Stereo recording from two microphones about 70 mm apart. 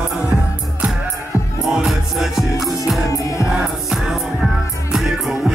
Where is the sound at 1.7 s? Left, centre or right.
Centre.